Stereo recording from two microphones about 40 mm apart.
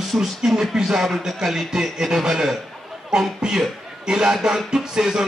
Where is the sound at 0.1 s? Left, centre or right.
Right.